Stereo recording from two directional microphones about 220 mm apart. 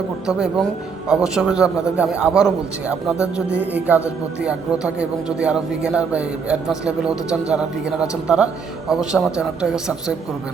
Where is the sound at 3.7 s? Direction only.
5° right (ahead or behind).